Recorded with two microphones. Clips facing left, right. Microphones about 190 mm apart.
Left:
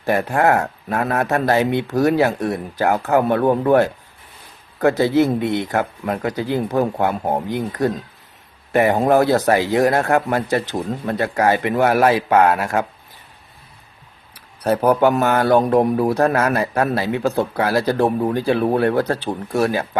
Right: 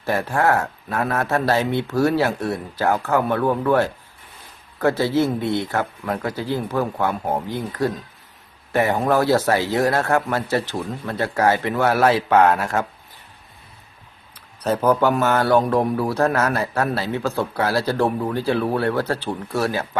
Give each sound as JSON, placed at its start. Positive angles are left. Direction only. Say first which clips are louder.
{"t": 0.0, "sound": "speech", "louder": "left 3 dB", "side_deg": 15}
{"t": 14.3, "sound": "speech", "louder": "left 3 dB", "side_deg": 15}